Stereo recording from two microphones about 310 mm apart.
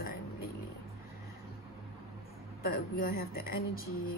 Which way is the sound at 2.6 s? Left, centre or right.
Left.